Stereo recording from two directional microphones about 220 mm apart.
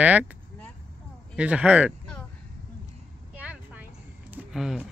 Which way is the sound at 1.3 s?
5° right (ahead or behind).